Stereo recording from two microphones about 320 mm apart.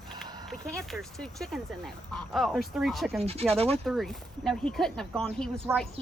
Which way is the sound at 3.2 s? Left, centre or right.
Centre.